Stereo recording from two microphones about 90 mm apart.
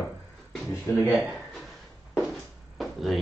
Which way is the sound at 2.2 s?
Centre (ahead or behind).